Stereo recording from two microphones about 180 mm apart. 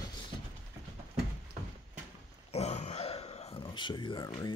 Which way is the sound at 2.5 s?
40° left (ahead or behind).